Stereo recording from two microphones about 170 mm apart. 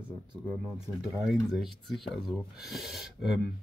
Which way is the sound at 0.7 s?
Centre (ahead or behind).